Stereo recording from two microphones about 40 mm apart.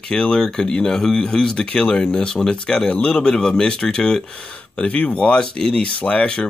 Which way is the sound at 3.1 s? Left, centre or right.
Centre.